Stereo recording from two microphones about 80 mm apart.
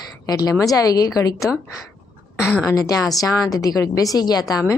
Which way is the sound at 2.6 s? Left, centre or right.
Left.